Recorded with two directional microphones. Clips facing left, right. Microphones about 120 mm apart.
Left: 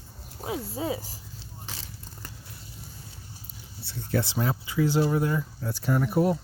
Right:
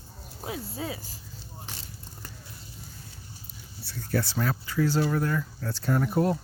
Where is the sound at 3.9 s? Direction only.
20° left (ahead or behind).